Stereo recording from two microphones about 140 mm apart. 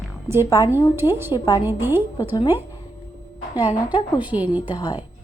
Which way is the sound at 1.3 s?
25° left (ahead or behind).